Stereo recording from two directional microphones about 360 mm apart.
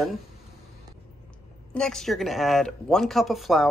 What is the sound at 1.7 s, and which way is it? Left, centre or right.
Speech, centre.